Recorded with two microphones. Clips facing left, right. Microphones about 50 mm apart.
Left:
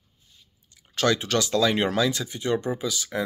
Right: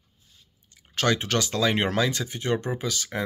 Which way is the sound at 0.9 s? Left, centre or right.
Right.